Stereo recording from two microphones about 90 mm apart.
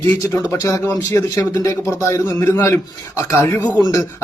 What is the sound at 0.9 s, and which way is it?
Speech, 25° left (ahead or behind).